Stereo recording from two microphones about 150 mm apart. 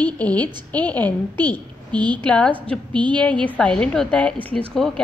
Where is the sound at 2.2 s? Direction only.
5° left (ahead or behind).